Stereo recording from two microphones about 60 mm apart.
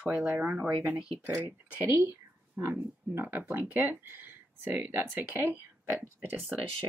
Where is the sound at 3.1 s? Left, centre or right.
Right.